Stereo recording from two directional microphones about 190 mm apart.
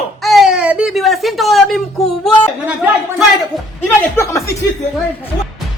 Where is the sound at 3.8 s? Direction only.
10° left (ahead or behind).